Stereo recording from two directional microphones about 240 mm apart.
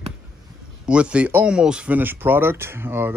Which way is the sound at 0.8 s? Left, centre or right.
Centre.